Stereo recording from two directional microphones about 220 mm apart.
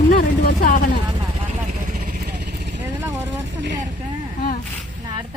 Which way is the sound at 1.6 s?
35° right (ahead or behind).